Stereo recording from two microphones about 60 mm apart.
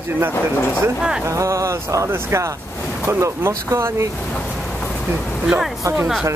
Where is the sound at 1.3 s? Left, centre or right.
Right.